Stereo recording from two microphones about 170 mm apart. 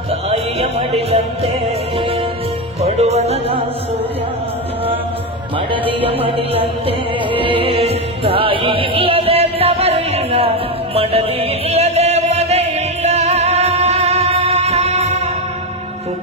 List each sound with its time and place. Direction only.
0.3 s music: 35° right (ahead or behind)
2.8 s music: 40° right (ahead or behind)
5.7 s music: 35° right (ahead or behind)